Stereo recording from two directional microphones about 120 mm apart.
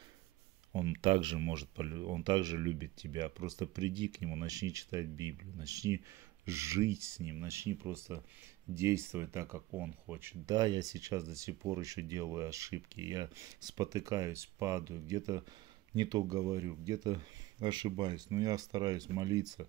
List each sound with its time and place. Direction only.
0.7 s speech: 30° right (ahead or behind)
1.0 s speech: 45° right (ahead or behind); by 10.5 s 20° right (ahead or behind)
10.5 s speech: 35° right (ahead or behind)